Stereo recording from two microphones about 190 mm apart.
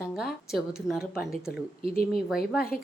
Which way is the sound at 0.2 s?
Centre (ahead or behind).